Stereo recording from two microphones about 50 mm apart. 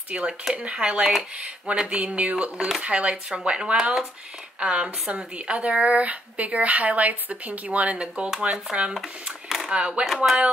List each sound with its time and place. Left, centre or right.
0.1 s speech: right
2.5 s speech: centre
2.8 s speech: right
8.9 s speech: centre
9.7 s speech: centre
10.0 s speech: centre